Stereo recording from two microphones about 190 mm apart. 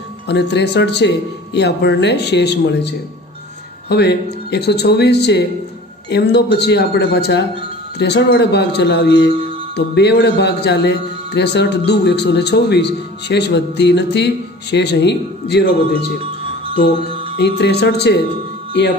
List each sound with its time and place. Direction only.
0.3 s a man's voice: 65° left (ahead or behind)
3.9 s a man's voice: 60° left (ahead or behind)
17.1 s music: 30° right (ahead or behind)
17.4 s a man's voice: 60° left (ahead or behind)